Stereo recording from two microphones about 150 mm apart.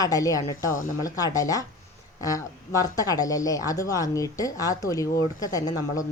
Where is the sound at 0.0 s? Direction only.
25° left (ahead or behind).